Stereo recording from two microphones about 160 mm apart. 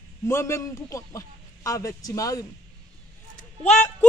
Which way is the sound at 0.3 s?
15° left (ahead or behind).